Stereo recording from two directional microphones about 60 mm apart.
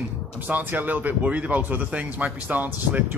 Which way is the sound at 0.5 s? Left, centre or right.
Right.